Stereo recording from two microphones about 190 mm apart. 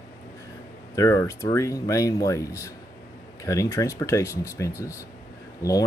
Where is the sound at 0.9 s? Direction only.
15° left (ahead or behind).